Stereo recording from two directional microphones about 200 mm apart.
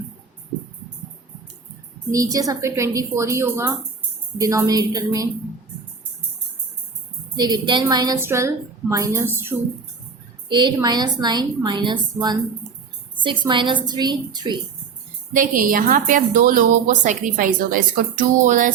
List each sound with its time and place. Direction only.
2.1 s a woman's voice: 15° right (ahead or behind)
7.3 s a woman's voice: 20° right (ahead or behind)
15.3 s a woman's voice: 40° right (ahead or behind)